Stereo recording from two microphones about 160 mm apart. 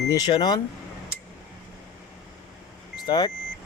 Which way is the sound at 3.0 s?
25° left (ahead or behind).